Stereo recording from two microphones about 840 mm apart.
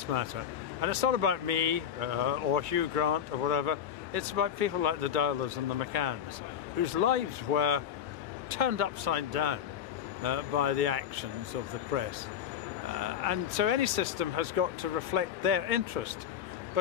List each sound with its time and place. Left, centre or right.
0.1 s speech: right